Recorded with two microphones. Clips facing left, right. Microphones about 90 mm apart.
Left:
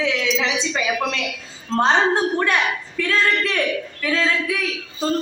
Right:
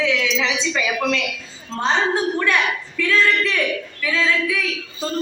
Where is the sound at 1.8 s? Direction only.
40° left (ahead or behind).